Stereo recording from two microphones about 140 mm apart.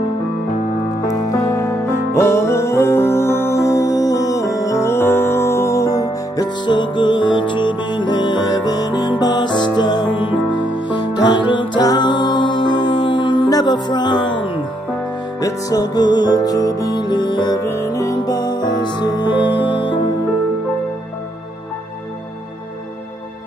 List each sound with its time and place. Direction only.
1.1 s music: 20° left (ahead or behind)
17.6 s music: 20° left (ahead or behind)